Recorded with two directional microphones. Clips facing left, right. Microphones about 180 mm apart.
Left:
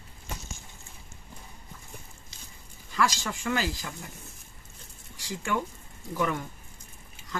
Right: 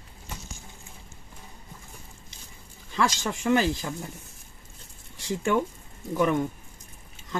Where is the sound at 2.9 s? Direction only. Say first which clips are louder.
Right 2 dB; 25° right (ahead or behind).